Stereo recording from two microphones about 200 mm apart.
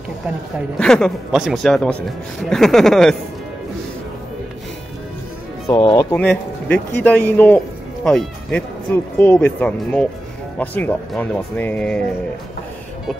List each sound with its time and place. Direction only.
0.7 s speech: 5° left (ahead or behind)
5.7 s speech: 20° left (ahead or behind)
6.1 s speech: 5° left (ahead or behind)